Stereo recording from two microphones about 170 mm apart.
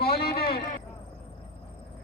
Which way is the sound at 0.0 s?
65° left (ahead or behind).